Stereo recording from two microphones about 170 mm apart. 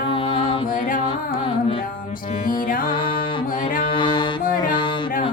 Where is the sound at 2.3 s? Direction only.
50° left (ahead or behind).